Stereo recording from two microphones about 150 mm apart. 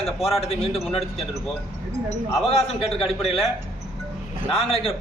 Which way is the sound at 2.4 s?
40° left (ahead or behind).